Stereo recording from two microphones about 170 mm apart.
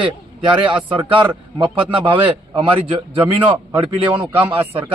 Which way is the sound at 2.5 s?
30° right (ahead or behind).